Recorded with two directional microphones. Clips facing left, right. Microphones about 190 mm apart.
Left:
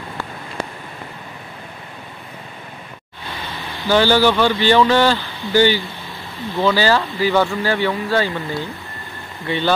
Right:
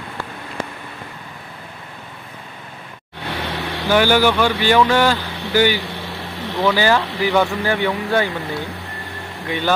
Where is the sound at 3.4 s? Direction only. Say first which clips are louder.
Right 6 dB; 75° right (ahead or behind).